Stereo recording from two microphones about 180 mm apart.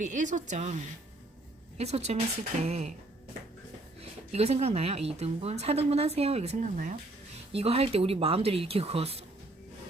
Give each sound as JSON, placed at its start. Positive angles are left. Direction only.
{"t": 0.0, "sound": "speech", "side_deg": -45}
{"t": 1.8, "sound": "a woman's voice", "side_deg": -35}
{"t": 4.3, "sound": "a woman's voice", "side_deg": -35}